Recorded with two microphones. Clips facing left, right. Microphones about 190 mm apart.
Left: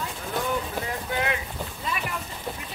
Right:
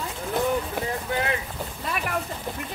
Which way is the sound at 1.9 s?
55° right (ahead or behind).